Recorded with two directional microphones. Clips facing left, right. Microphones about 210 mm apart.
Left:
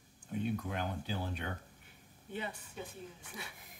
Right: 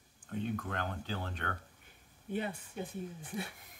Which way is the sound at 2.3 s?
50° right (ahead or behind).